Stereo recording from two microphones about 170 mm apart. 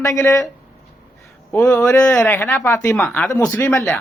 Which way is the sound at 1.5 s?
10° left (ahead or behind).